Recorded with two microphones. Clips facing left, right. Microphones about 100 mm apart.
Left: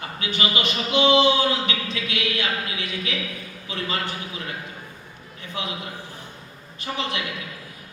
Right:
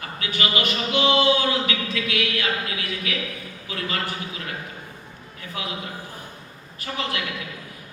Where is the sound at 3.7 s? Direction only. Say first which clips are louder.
Even; 25° left (ahead or behind).